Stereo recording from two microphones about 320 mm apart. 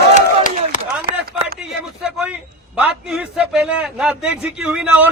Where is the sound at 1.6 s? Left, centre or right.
Centre.